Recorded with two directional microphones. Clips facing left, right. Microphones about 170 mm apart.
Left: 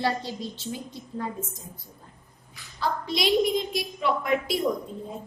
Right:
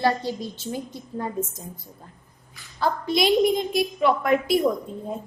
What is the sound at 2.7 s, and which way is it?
A woman's voice, 50° right (ahead or behind).